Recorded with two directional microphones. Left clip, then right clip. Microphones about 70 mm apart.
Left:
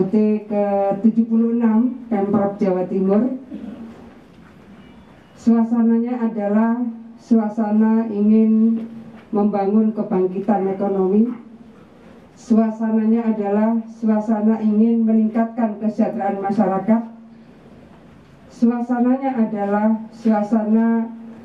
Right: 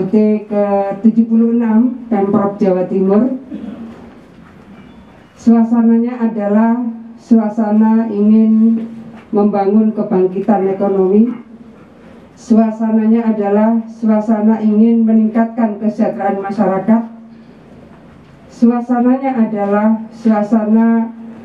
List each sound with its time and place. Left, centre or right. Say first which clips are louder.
0.3 s a woman's voice: right 5 dB; centre
5.6 s a woman's voice: right 6 dB; centre
12.4 s a woman's voice: right 5 dB; centre
18.6 s a woman's voice: right 6 dB; centre